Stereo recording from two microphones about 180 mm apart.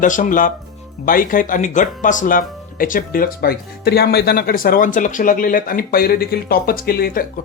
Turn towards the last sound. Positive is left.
turn(degrees=55)  # may be behind; listen again after turning